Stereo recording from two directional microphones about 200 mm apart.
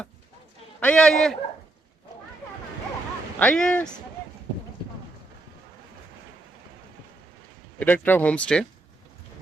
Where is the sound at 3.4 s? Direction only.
5° left (ahead or behind).